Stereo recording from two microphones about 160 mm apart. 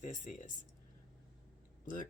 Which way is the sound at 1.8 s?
55° left (ahead or behind).